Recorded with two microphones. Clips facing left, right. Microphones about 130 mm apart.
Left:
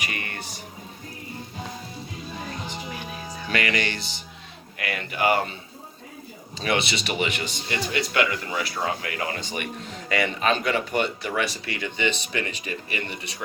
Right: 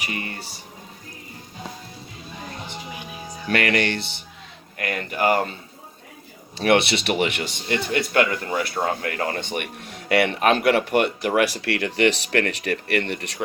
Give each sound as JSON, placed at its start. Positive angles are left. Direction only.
{"t": 0.0, "sound": "music", "side_deg": -30}
{"t": 3.5, "sound": "speech", "side_deg": -60}
{"t": 4.8, "sound": "speech", "side_deg": -45}
{"t": 6.6, "sound": "speech", "side_deg": -65}
{"t": 9.4, "sound": "speech", "side_deg": -60}